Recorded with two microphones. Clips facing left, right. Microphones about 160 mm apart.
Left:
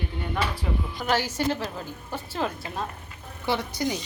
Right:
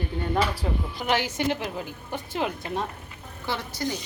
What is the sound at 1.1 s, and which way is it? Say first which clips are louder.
Speech: even; 15° right (ahead or behind).